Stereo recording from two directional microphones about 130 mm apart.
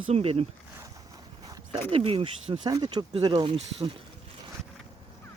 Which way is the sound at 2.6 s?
30° right (ahead or behind).